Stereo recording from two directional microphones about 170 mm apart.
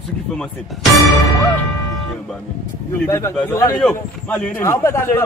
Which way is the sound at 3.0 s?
15° left (ahead or behind).